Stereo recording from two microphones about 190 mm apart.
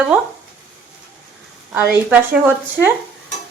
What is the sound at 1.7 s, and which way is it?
Speech, 10° right (ahead or behind).